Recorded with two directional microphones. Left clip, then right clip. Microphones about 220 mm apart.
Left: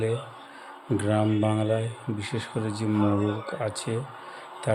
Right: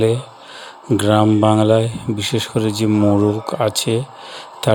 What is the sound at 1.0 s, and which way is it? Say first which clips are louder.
Speech: right 12 dB; 35° right (ahead or behind).